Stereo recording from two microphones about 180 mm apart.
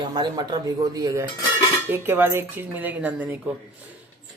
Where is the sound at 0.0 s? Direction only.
25° right (ahead or behind); by 3.2 s 10° right (ahead or behind).